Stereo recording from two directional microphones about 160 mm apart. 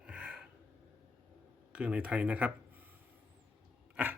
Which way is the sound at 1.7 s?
10° right (ahead or behind).